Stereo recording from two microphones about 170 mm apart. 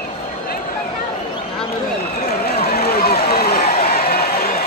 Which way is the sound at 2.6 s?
65° left (ahead or behind).